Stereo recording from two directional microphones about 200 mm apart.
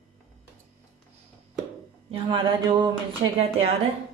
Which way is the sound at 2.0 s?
25° right (ahead or behind).